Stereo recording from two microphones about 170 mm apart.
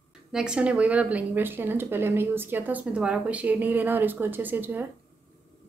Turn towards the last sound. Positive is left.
turn(degrees=-10)  # may be behind; listen again after turning